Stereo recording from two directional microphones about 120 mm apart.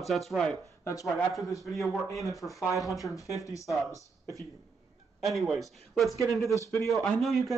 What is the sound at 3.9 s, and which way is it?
Speech, 25° right (ahead or behind).